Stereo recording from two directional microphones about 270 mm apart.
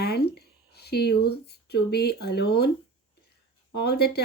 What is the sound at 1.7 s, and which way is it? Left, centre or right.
Speech, left.